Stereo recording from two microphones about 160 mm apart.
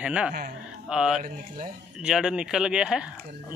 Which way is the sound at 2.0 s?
5° right (ahead or behind).